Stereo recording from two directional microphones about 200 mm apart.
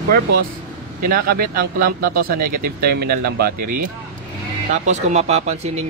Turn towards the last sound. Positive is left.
turn(degrees=-35)  # may be behind; listen again after turning